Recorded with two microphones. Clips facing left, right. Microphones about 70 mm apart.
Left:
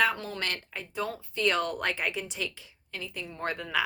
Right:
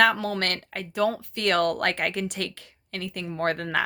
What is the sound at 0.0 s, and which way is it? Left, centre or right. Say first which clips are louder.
Speech: right 6 dB; right.